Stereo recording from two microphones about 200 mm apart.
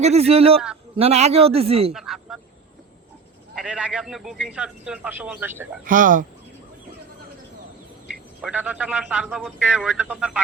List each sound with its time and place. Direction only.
0.0 s a man's voice: 30° right (ahead or behind)
1.9 s a sound: centre (ahead or behind)
3.5 s speech: 5° right (ahead or behind)
5.8 s speech: 45° right (ahead or behind)
8.0 s speech: 5° right (ahead or behind)